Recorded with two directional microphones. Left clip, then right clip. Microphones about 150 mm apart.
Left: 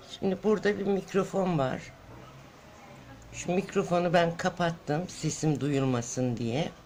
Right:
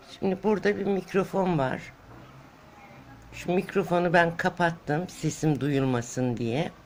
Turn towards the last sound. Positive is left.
turn(degrees=-10)  # may be behind; listen again after turning